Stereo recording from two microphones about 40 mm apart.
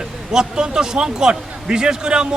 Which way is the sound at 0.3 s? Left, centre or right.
Right.